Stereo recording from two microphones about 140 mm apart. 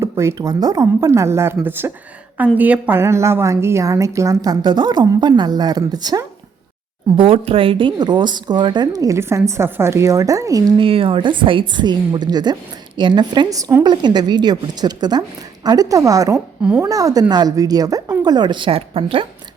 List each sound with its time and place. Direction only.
0.0 s a woman's voice: 20° right (ahead or behind)
7.2 s a woman's voice: 40° right (ahead or behind); by 10.6 s 25° right (ahead or behind)
10.8 s a woman's voice: 40° right (ahead or behind); by 13.8 s 20° right (ahead or behind)
13.8 s a woman's voice: 30° right (ahead or behind)